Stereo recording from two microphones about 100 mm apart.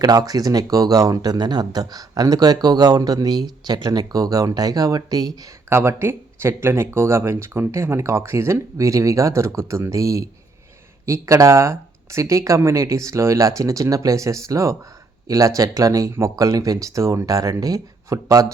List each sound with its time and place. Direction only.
0.0 s speech: 40° right (ahead or behind)
5.6 s speech: 25° right (ahead or behind)